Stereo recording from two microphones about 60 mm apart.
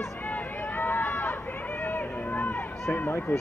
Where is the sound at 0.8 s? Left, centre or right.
Left.